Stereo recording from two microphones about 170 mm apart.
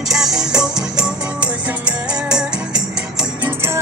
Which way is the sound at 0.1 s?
5° right (ahead or behind).